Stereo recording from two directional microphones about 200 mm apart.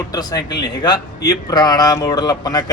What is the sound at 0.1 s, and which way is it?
Speech, 20° left (ahead or behind).